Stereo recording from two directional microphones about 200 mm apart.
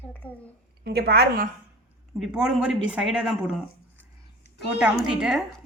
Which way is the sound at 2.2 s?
Centre (ahead or behind).